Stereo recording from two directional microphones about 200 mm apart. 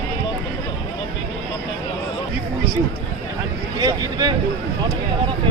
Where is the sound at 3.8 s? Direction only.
20° right (ahead or behind).